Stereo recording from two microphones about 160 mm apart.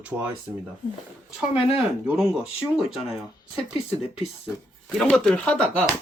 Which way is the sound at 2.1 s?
5° right (ahead or behind).